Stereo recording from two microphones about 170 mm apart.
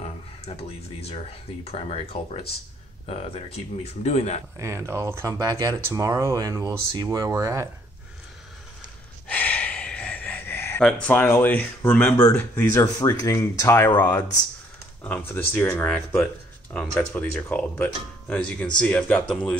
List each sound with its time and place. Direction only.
0.0 s speech: 35° left (ahead or behind)
4.6 s speech: 15° right (ahead or behind)
9.3 s gasp: 10° left (ahead or behind)
12.2 s speech: 15° left (ahead or behind)